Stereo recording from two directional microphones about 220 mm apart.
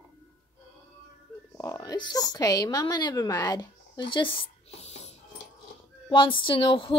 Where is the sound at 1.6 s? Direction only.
15° left (ahead or behind).